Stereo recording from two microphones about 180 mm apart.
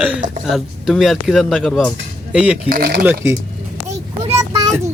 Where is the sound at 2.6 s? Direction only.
55° right (ahead or behind).